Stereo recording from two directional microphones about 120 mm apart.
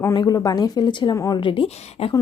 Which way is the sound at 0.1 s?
35° left (ahead or behind).